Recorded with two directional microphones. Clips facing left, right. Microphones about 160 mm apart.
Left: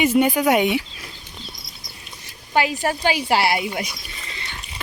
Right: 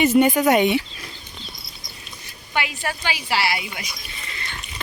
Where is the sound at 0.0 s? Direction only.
5° left (ahead or behind).